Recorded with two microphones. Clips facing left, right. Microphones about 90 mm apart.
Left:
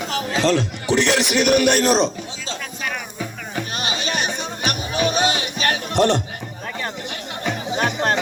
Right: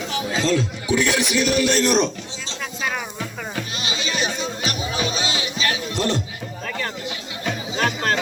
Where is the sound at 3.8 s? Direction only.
55° left (ahead or behind).